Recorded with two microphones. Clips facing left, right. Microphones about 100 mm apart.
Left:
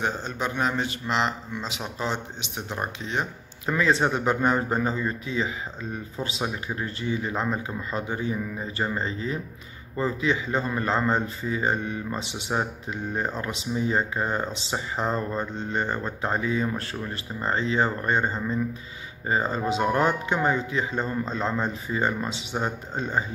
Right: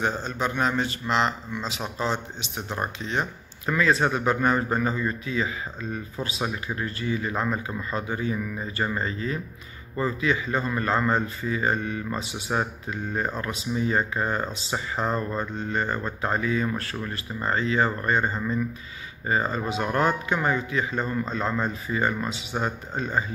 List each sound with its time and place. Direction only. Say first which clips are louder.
0.0 s a man's voice: right 1 dB; 15° left (ahead or behind)